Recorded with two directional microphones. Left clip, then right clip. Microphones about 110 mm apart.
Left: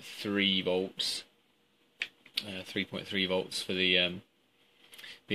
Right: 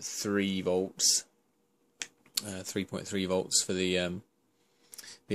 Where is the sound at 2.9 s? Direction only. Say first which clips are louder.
Even; 25° right (ahead or behind).